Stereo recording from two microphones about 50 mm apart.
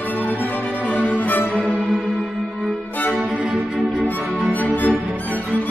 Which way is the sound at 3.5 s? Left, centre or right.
Centre.